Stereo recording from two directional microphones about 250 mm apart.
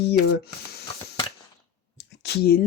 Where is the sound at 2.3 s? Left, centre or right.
Left.